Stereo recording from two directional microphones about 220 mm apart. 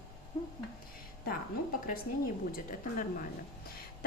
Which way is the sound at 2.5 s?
35° left (ahead or behind).